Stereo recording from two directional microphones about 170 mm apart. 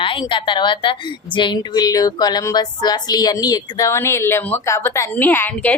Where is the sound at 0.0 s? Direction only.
30° left (ahead or behind).